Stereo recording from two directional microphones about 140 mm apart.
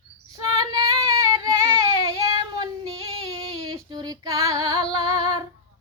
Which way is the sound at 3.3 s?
25° right (ahead or behind).